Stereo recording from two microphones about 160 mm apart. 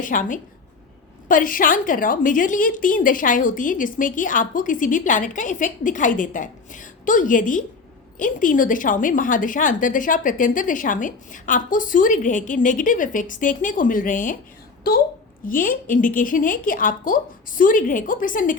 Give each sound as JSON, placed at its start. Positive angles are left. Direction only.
{"t": 0.0, "sound": "a woman's voice", "side_deg": 55}
{"t": 15.4, "sound": "a woman's voice", "side_deg": 60}